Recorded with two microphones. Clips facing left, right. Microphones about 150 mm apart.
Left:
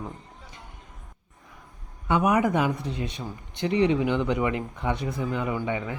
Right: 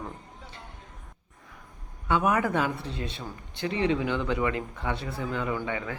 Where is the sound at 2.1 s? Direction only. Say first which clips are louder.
Left 3 dB; 15° left (ahead or behind).